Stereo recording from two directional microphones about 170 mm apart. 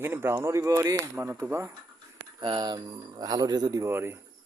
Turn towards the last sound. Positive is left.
turn(degrees=-15)  # may be behind; listen again after turning